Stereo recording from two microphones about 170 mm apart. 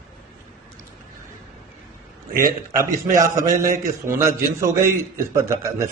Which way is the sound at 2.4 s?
20° right (ahead or behind).